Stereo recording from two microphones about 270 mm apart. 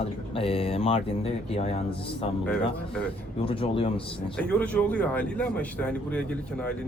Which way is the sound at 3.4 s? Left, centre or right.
Centre.